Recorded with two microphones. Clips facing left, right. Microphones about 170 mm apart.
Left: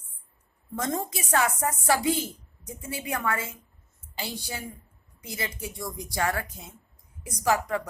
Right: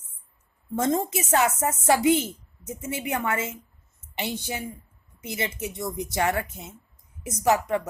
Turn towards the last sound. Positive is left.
turn(degrees=-20)  # may be behind; listen again after turning